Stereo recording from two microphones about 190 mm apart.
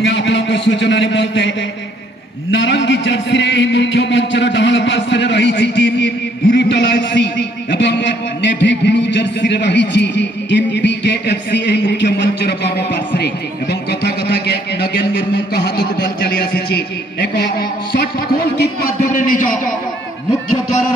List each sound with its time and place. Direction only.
0.0 s music: 75° left (ahead or behind)
2.5 s music: 75° left (ahead or behind)
6.4 s a man's voice: 60° left (ahead or behind)
19.1 s a man's voice: 45° left (ahead or behind)